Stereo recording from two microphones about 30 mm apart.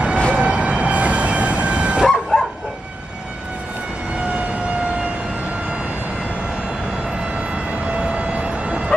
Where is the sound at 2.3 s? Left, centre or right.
Left.